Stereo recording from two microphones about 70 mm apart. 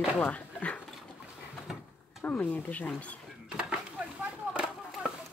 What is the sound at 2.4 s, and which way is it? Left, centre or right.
Speech, left.